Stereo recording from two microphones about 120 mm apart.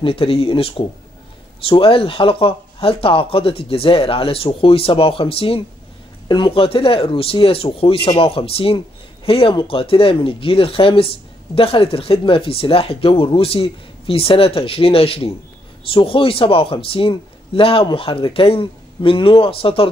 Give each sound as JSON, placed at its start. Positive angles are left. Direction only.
{"t": 0.0, "sound": "speech", "side_deg": 50}